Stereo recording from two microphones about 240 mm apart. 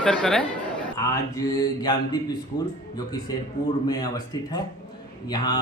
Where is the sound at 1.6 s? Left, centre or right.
Centre.